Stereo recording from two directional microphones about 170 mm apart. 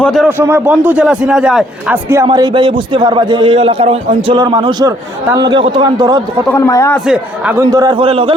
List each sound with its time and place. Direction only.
0.0 s a man's voice: centre (ahead or behind)
0.3 s a man's voice: 10° right (ahead or behind)
2.2 s a man's voice: 25° right (ahead or behind)
6.5 s a man's voice: 15° left (ahead or behind)
7.1 s a man's voice: 5° right (ahead or behind)
7.7 s a man's voice: 20° right (ahead or behind)